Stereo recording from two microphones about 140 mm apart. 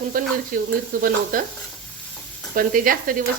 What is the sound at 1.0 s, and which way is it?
Speech, 90° right.